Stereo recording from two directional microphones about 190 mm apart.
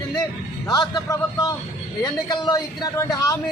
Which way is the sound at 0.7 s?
20° left (ahead or behind).